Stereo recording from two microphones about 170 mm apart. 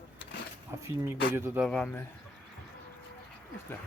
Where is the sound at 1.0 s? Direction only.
15° right (ahead or behind).